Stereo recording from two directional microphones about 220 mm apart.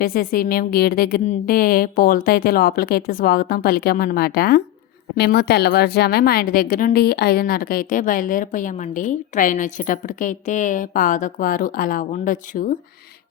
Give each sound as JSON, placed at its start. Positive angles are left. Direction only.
{"t": 0.0, "sound": "a woman's voice", "side_deg": 40}